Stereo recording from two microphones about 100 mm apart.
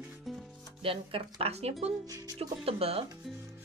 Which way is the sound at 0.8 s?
65° right (ahead or behind).